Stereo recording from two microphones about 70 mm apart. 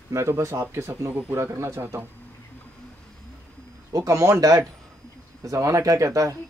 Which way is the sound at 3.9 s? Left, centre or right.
Right.